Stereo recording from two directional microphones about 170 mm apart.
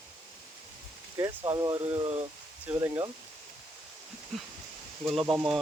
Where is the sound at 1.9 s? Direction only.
35° right (ahead or behind).